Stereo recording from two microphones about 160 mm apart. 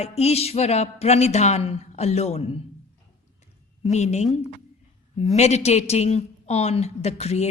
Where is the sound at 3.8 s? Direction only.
45° left (ahead or behind).